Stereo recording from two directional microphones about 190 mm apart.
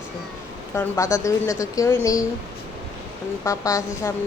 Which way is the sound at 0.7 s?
15° left (ahead or behind).